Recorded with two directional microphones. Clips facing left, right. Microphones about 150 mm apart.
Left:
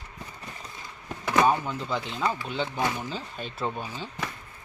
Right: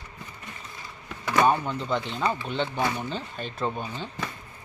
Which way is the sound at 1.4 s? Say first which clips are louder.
Right 1 dB; 5° left (ahead or behind).